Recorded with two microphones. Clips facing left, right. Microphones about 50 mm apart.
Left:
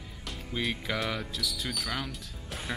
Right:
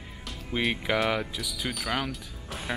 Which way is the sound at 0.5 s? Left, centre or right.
Right.